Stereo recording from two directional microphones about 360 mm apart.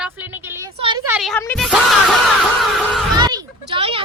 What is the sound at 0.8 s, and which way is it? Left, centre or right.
A woman's voice, centre.